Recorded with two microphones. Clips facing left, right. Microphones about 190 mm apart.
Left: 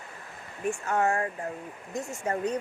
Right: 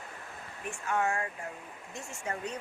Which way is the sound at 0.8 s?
40° left (ahead or behind).